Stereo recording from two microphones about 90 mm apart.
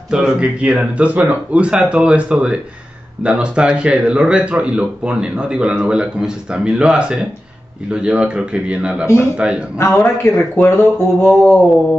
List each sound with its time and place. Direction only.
0.1 s speech: 10° right (ahead or behind)
9.8 s speech: 25° left (ahead or behind)